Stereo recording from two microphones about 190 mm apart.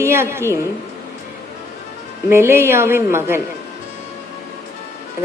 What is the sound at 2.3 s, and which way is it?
A woman's voice, 15° right (ahead or behind).